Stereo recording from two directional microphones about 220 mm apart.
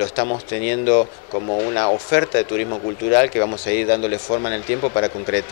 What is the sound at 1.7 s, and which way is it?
Speech, 20° left (ahead or behind).